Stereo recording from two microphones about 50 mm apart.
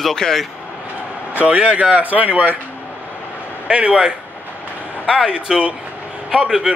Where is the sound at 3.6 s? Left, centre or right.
Right.